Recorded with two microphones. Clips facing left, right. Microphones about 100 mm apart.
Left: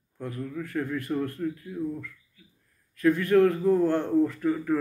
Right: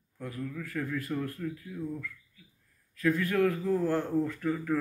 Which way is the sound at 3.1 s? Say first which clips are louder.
Left 7 dB; 25° left (ahead or behind).